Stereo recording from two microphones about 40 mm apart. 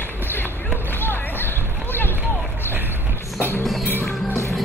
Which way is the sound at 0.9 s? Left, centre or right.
Left.